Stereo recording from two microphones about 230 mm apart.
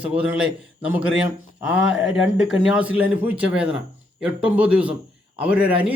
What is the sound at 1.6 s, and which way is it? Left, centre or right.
Speech, left.